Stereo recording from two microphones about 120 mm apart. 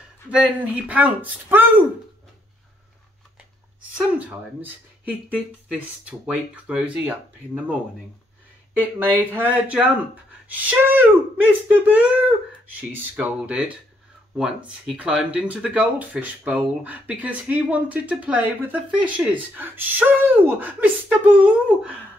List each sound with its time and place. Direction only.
0.3 s speech: 10° right (ahead or behind)
6.0 s speech: 10° right (ahead or behind)
8.7 s speech: 15° right (ahead or behind)
10.5 s speech: 15° right (ahead or behind)